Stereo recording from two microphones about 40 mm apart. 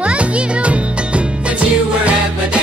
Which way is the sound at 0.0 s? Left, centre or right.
Right.